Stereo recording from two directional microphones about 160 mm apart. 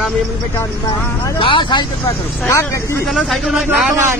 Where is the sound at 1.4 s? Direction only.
30° left (ahead or behind).